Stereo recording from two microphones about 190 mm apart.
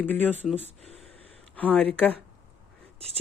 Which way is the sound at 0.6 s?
35° right (ahead or behind).